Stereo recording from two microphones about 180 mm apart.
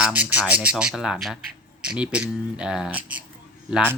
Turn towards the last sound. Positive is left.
turn(degrees=-5)  # may be behind; listen again after turning